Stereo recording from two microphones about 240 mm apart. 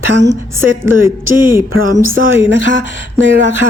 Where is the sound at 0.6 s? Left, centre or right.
Centre.